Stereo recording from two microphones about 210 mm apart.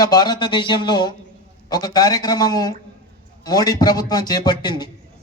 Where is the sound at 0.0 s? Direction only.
20° left (ahead or behind).